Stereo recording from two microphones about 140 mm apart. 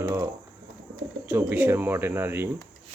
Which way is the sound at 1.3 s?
10° right (ahead or behind).